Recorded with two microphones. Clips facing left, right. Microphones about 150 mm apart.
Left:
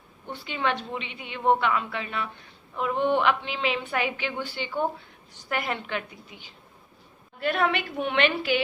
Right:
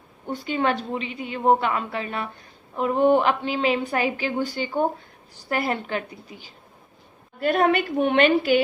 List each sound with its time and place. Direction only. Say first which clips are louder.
0.3 s a woman's voice: right 5 dB; 40° right (ahead or behind)